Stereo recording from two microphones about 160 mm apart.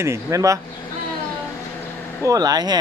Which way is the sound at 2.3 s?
25° right (ahead or behind).